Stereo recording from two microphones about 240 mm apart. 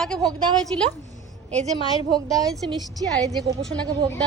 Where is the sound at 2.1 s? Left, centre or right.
Centre.